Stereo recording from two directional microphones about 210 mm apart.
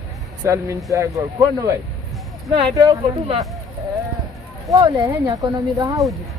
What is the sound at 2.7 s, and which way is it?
Speech, 15° right (ahead or behind).